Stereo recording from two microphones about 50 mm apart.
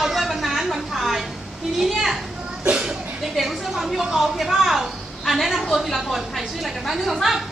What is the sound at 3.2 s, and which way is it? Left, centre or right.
A woman's voice, centre.